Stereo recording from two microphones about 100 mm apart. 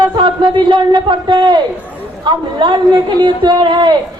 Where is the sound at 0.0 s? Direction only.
50° right (ahead or behind).